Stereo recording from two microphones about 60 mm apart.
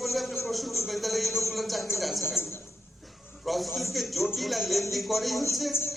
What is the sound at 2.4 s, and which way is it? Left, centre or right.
Speech, left.